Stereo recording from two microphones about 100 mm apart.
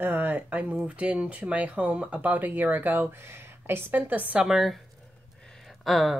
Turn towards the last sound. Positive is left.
turn(degrees=0)  # may be behind; listen again after turning